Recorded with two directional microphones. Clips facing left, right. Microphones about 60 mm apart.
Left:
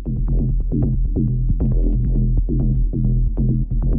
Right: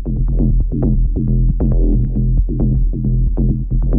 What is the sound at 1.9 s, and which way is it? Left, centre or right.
Music, centre.